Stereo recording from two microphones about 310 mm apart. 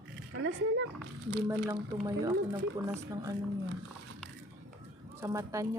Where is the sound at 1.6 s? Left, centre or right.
Centre.